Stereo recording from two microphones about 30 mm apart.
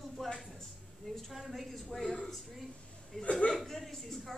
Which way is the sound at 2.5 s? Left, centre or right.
Centre.